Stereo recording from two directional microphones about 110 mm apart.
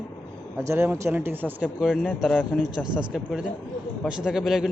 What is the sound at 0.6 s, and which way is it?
A man's voice, 25° right (ahead or behind).